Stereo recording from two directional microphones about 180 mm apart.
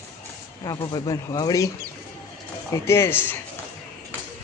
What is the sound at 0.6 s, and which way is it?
Speech, 20° left (ahead or behind).